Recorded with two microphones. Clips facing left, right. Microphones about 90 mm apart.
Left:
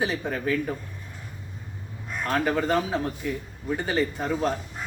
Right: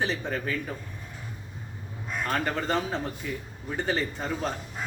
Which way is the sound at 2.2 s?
Centre (ahead or behind).